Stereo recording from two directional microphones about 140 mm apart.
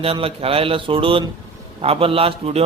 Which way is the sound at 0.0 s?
40° right (ahead or behind).